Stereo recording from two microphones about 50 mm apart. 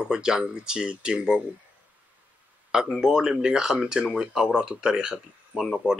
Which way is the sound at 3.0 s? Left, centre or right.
Centre.